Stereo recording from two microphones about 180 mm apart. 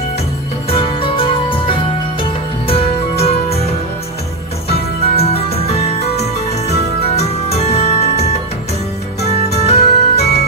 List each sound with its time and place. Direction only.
0.7 s music: 30° left (ahead or behind)
4.6 s music: 35° left (ahead or behind)
9.6 s music: 35° left (ahead or behind)